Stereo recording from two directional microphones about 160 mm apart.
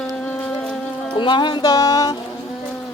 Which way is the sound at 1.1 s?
30° left (ahead or behind).